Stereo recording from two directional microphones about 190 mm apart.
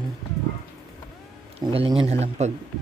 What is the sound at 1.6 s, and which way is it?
Speech, 30° right (ahead or behind).